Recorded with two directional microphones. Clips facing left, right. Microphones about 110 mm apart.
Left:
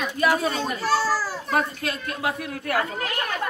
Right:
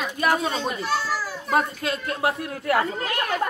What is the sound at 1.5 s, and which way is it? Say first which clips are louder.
Speech: right 2 dB; 25° right (ahead or behind).